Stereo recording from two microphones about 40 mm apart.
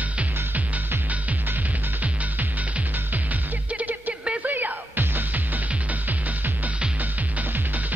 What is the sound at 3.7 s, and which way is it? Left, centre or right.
Music, right.